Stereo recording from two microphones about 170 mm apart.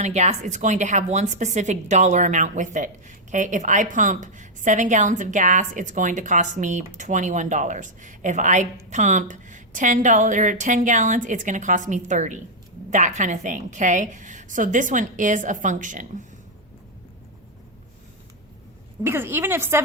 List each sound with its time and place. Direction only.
0.0 s a woman's voice: 40° right (ahead or behind)
19.0 s a woman's voice: 15° right (ahead or behind)